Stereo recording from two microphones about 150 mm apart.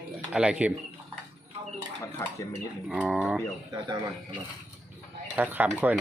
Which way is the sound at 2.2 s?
15° left (ahead or behind).